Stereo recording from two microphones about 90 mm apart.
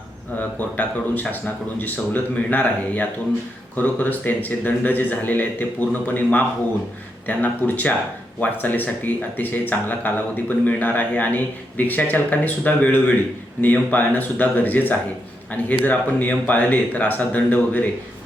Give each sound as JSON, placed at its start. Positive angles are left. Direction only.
{"t": 0.3, "sound": "speech", "side_deg": 15}